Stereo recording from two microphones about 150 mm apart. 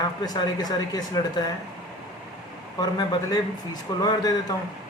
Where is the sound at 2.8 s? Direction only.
30° left (ahead or behind).